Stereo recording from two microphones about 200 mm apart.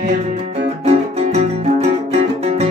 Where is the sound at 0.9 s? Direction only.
30° right (ahead or behind).